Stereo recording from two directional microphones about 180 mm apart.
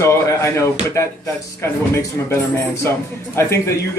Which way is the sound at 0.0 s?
15° left (ahead or behind).